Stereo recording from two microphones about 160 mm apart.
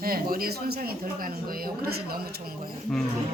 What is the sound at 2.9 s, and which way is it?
Speech, 5° left (ahead or behind).